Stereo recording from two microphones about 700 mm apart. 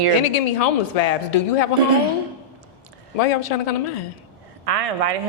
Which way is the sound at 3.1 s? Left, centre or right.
Left.